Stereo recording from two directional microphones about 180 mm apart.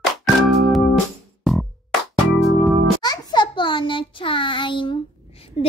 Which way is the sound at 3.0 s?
20° left (ahead or behind).